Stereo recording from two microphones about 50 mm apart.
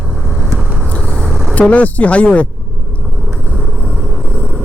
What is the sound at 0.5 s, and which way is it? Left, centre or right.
Vehicle, right.